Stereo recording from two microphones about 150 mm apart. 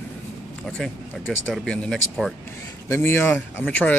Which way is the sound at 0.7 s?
5° left (ahead or behind).